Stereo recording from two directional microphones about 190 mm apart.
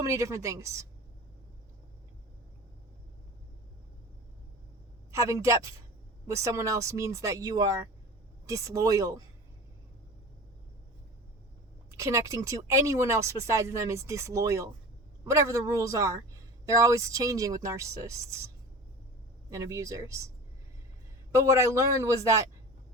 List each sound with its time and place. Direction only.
0.0 s speech: 15° right (ahead or behind)
5.1 s speech: 15° right (ahead or behind)
11.9 s speech: 15° right (ahead or behind)
19.5 s speech: 15° right (ahead or behind)
21.3 s speech: 15° right (ahead or behind)